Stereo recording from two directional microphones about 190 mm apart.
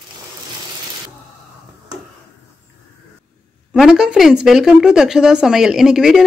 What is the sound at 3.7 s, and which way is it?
Speech, 5° right (ahead or behind).